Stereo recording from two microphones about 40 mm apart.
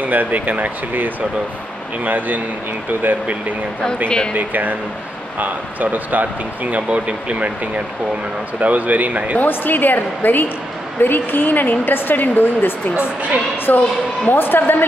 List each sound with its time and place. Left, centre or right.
0.0 s speech: right
6.9 s speech: right
8.5 s speech: right
9.4 s a woman's voice: left
12.9 s speech: right
13.7 s a woman's voice: left